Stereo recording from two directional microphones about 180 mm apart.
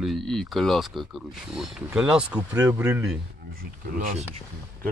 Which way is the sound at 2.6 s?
15° right (ahead or behind).